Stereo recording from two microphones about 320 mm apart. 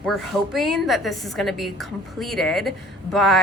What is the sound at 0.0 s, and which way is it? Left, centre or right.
A woman's voice, centre.